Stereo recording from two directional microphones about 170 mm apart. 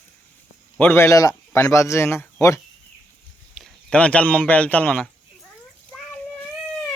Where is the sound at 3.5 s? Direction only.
5° left (ahead or behind).